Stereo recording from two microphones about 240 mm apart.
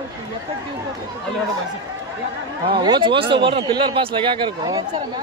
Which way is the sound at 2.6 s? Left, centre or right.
Centre.